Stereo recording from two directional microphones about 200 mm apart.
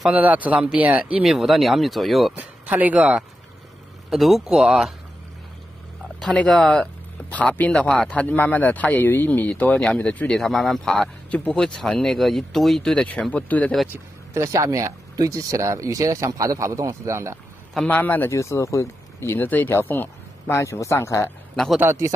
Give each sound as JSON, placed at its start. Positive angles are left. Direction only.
{"t": 0.0, "sound": "speech", "side_deg": -5}
{"t": 6.1, "sound": "speech", "side_deg": 5}
{"t": 14.3, "sound": "speech", "side_deg": -15}
{"t": 17.7, "sound": "speech", "side_deg": 10}
{"t": 21.5, "sound": "speech", "side_deg": 0}